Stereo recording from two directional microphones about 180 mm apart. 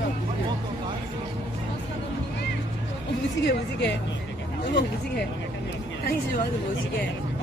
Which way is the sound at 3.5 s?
70° left (ahead or behind).